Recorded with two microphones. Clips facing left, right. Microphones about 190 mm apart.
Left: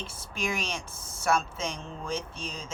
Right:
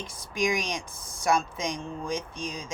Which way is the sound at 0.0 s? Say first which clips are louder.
Right 5 dB; 15° right (ahead or behind).